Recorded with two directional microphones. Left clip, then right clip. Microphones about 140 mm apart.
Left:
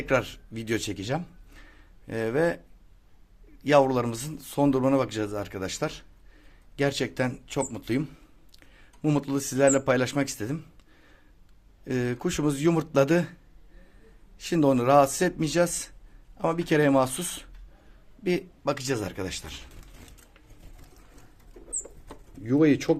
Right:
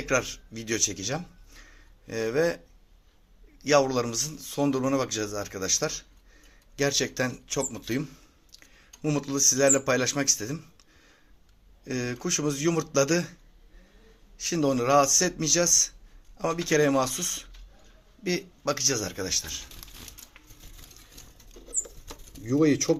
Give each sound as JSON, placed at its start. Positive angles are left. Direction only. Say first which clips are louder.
{"t": 0.0, "sound": "speech", "louder": "left 1 dB", "side_deg": 35}
{"t": 3.6, "sound": "a man's voice", "louder": "left 2 dB", "side_deg": 35}
{"t": 11.9, "sound": "a man's voice", "louder": "left 1 dB", "side_deg": 35}
{"t": 14.3, "sound": "a man's voice", "louder": "left 3 dB", "side_deg": 40}
{"t": 22.4, "sound": "speech", "louder": "left 1 dB", "side_deg": 0}